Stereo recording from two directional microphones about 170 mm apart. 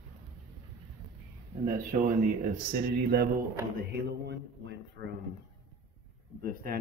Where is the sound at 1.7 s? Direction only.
50° right (ahead or behind).